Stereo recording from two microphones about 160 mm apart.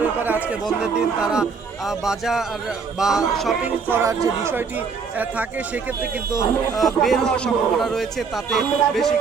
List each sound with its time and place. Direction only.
0.0 s chatter: 10° right (ahead or behind)
0.6 s speech: 5° right (ahead or behind)
3.8 s speech: 15° right (ahead or behind); by 9.1 s centre (ahead or behind)